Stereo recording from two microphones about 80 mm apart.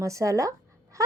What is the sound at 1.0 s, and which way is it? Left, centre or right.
Frog, right.